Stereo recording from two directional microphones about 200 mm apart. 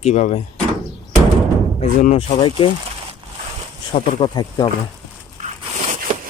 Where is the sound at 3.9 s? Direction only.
25° left (ahead or behind).